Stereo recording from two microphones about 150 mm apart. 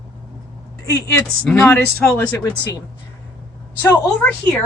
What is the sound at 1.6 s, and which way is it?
Speech, 10° left (ahead or behind).